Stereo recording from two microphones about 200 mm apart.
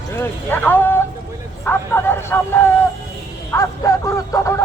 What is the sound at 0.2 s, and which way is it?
Speech, 10° left (ahead or behind).